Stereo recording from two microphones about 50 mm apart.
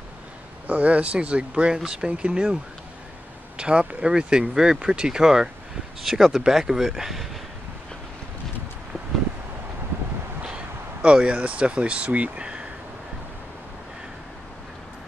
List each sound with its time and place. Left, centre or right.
0.7 s speech: right; by 7.2 s centre
10.4 s speech: centre